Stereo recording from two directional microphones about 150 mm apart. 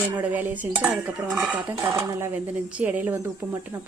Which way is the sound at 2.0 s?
20° right (ahead or behind).